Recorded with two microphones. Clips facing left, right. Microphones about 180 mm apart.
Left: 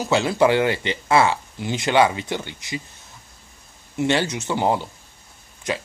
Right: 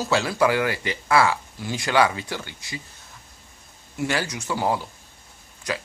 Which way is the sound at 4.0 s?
25° left (ahead or behind).